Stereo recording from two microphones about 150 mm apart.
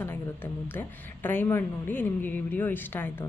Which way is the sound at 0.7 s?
15° left (ahead or behind).